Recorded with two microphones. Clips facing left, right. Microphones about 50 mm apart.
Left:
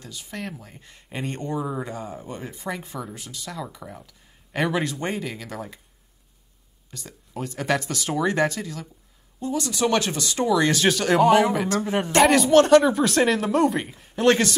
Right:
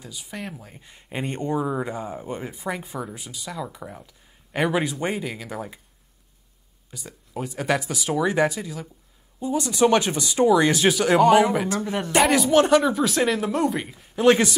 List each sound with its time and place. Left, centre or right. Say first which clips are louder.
0.0 s speech: left 1 dB; centre
6.9 s speech: right 2 dB; centre
11.8 s speech: left 2 dB; centre
12.2 s speech: left 2 dB; centre